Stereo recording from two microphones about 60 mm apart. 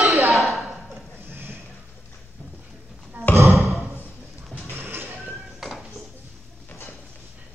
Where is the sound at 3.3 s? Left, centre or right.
Right.